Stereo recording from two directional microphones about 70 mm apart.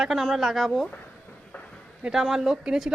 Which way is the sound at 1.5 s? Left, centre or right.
Centre.